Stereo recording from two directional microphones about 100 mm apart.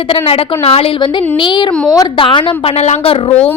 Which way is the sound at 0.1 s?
75° left (ahead or behind).